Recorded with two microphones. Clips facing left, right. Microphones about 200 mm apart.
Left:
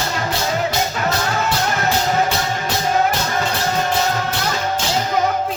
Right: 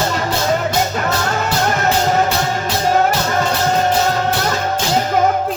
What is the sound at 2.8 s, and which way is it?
Music, 40° right (ahead or behind).